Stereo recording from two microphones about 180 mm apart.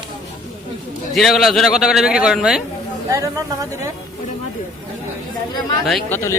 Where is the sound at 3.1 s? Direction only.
20° right (ahead or behind).